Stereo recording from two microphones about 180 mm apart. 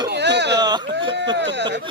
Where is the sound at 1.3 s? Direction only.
75° right (ahead or behind).